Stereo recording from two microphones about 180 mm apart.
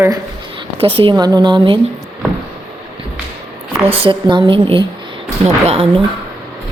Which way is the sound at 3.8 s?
30° right (ahead or behind).